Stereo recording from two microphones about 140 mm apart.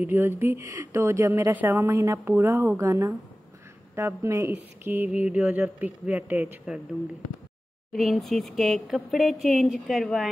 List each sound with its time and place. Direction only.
0.0 s speech: 15° right (ahead or behind)
7.9 s speech: centre (ahead or behind)